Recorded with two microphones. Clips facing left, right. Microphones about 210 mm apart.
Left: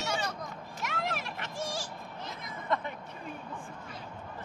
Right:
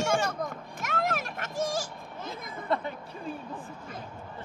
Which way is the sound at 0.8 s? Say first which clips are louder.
Right 5 dB; 45° right (ahead or behind).